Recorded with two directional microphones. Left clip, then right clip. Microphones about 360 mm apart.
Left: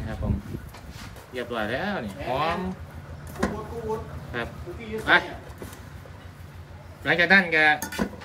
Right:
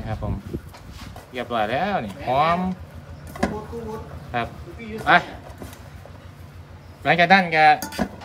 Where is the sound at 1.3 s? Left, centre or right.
Right.